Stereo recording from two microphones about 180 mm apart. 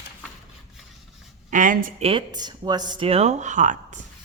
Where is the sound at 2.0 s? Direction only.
30° right (ahead or behind).